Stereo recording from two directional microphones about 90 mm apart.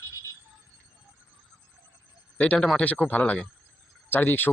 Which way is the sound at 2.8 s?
15° left (ahead or behind).